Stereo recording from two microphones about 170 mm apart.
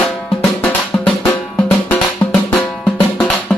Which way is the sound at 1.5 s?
10° left (ahead or behind).